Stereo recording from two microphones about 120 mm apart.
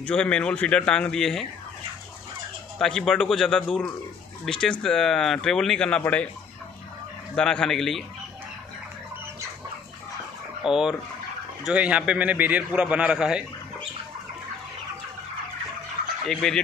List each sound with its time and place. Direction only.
0.0 s a man's voice: 10° left (ahead or behind)
2.8 s speech: 5° left (ahead or behind)
7.3 s speech: 5° left (ahead or behind)
10.6 s a man's voice: 5° right (ahead or behind)
16.3 s speech: 5° left (ahead or behind)